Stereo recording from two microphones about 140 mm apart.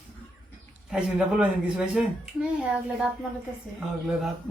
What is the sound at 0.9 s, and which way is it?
A man's voice, 5° right (ahead or behind).